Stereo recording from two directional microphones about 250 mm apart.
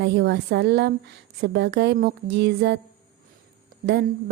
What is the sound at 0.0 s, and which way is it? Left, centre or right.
Speech, right.